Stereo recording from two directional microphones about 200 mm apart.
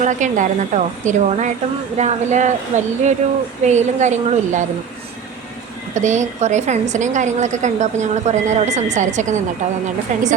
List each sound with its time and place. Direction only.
0.0 s a woman's voice: 35° right (ahead or behind)
5.9 s a woman's voice: 35° right (ahead or behind)